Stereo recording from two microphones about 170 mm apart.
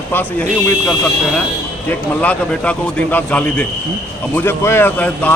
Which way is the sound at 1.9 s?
5° left (ahead or behind).